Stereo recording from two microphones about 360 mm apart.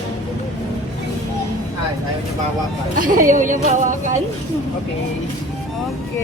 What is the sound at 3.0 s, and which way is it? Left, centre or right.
A woman's voice, right.